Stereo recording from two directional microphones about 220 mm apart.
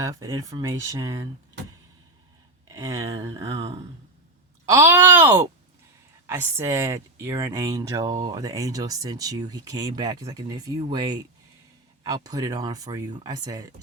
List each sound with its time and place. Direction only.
0.0 s speech: 15° right (ahead or behind)
2.6 s speech: 15° right (ahead or behind)
3.6 s speech: 25° right (ahead or behind)
4.6 s speech: 10° right (ahead or behind)